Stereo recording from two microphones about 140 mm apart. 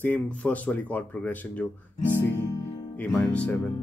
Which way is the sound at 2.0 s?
15° left (ahead or behind).